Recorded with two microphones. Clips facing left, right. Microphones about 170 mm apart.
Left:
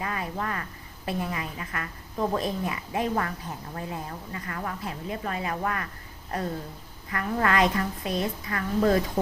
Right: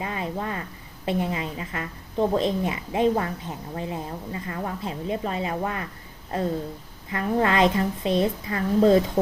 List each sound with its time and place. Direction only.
0.0 s a woman's voice: 25° right (ahead or behind)
7.1 s a woman's voice: 25° right (ahead or behind)